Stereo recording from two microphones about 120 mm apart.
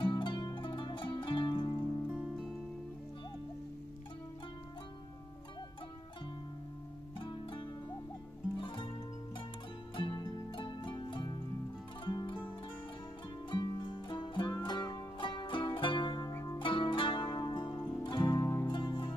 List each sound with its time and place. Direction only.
0.0 s zither: 40° left (ahead or behind)
2.1 s music: 5° right (ahead or behind)
7.2 s music: 40° left (ahead or behind)
9.9 s music: 40° left (ahead or behind)
12.0 s zither: 40° left (ahead or behind)
13.5 s music: 40° left (ahead or behind)
16.3 s zither: 30° left (ahead or behind)
16.5 s zither: 45° left (ahead or behind)
18.0 s music: 40° left (ahead or behind)
18.4 s music: 20° left (ahead or behind)
18.7 s music: 40° left (ahead or behind)